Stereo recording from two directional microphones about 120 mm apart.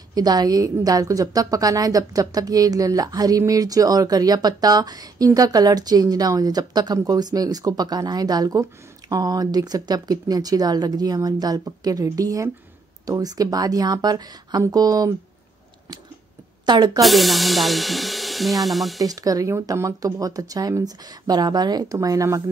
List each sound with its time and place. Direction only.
0.1 s a woman's voice: 35° right (ahead or behind)
16.6 s a woman's voice: 35° right (ahead or behind)
17.0 s speech: centre (ahead or behind)
18.9 s speech: 30° right (ahead or behind)